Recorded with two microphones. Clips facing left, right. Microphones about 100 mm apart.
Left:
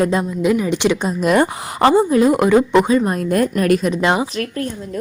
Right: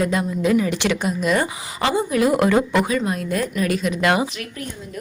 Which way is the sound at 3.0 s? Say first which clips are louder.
Left 6 dB; 45° left (ahead or behind).